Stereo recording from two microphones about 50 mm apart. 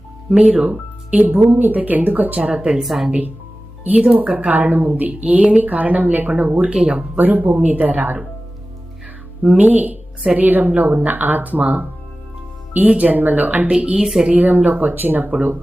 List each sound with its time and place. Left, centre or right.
0.3 s speech: centre
0.7 s a woman's voice: right
2.8 s speech: centre
4.0 s a woman's voice: right
7.2 s a woman's voice: right
9.6 s a woman's voice: right
13.7 s a woman's voice: right
14.3 s a woman's voice: right